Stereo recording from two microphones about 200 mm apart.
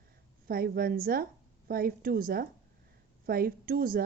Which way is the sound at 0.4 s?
50° right (ahead or behind).